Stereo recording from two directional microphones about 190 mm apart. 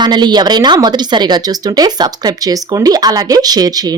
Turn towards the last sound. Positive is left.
turn(degrees=-20)  # may be behind; listen again after turning